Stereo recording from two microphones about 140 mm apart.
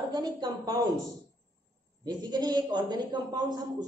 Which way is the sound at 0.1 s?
30° right (ahead or behind).